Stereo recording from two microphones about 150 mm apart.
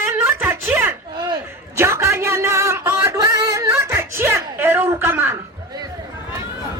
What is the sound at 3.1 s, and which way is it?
Music, 25° right (ahead or behind).